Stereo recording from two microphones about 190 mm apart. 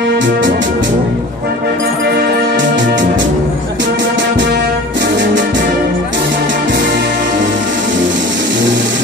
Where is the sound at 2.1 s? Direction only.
55° right (ahead or behind).